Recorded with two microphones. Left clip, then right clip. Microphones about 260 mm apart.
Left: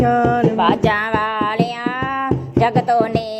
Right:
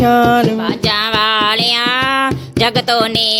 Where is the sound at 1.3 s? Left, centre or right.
Right.